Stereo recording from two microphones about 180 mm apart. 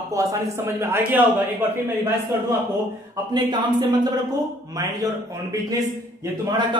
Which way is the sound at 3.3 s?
25° right (ahead or behind).